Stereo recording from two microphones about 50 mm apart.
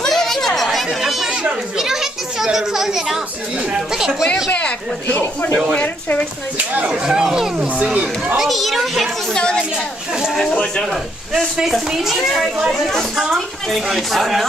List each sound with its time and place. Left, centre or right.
0.0 s chatter: centre
1.8 s children playing: centre
3.7 s speech: centre
4.5 s speech: left
6.9 s speech: centre
7.8 s speech: right
8.4 s a woman's voice: centre
9.3 s a woman's voice: centre
10.6 s a woman's voice: centre
11.9 s speech: centre
12.7 s a woman's voice: centre